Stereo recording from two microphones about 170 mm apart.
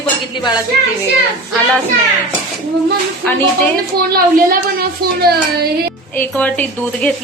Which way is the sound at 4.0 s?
60° right (ahead or behind).